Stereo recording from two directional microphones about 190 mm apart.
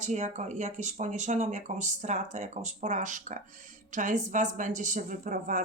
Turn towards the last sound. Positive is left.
turn(degrees=-45)  # may be behind; listen again after turning